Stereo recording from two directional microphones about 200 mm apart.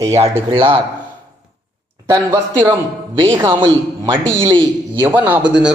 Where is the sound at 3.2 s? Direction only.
20° right (ahead or behind).